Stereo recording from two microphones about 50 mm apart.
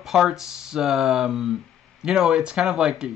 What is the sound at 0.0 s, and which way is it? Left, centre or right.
Speech, centre.